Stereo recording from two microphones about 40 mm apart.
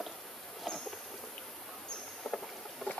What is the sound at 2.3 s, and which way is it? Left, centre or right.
Rowboat, left.